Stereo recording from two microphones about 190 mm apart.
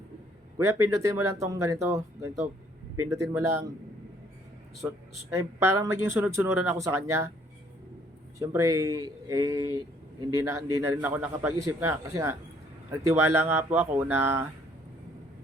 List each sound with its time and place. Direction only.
0.6 s speech: 15° right (ahead or behind)
4.8 s speech: 15° right (ahead or behind)
8.4 s speech: 15° right (ahead or behind)